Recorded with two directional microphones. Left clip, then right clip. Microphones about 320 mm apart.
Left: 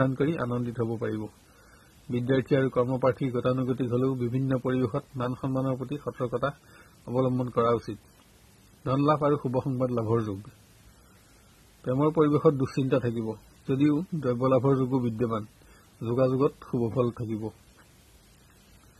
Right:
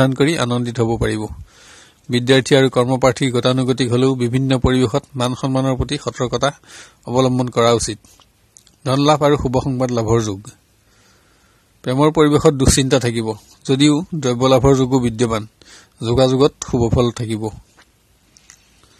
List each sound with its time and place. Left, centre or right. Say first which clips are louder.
0.0 s speech: right 11 dB; right
8.8 s speech: right 10 dB; right
11.8 s speech: right 10 dB; right